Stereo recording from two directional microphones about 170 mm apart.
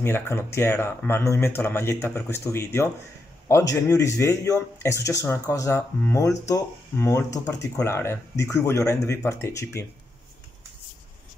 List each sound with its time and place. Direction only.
0.0 s speech: 15° left (ahead or behind)